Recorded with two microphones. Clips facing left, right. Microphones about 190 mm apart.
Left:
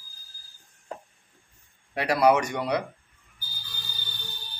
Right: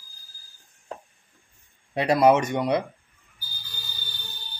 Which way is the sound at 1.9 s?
20° right (ahead or behind).